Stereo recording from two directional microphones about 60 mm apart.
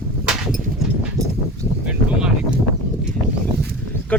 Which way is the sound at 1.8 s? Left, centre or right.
Centre.